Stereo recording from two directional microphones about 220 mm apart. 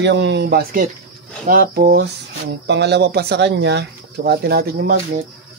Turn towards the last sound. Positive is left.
turn(degrees=-45)  # may be behind; listen again after turning